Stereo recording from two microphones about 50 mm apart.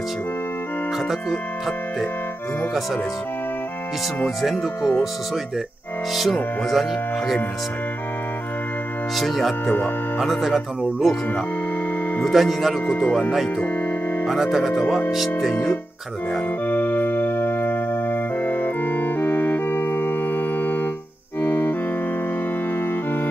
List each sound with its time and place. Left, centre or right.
4.4 s speech: centre
6.7 s speech: centre
9.1 s speech: centre
12.3 s speech: centre
12.9 s speech: centre
14.2 s speech: centre
16.6 s organ: left